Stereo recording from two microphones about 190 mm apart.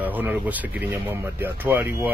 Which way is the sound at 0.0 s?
10° right (ahead or behind).